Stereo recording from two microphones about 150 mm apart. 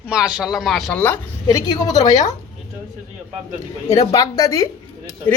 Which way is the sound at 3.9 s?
20° left (ahead or behind).